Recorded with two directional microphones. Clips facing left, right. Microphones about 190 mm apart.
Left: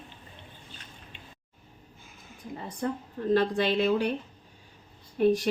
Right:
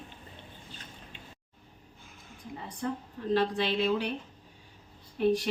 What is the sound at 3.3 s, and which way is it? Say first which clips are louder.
Speech: left 3 dB; 45° left (ahead or behind).